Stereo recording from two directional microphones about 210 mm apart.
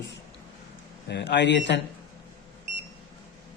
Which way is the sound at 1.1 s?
55° left (ahead or behind).